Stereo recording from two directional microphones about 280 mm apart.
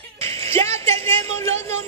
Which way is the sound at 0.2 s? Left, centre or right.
Centre.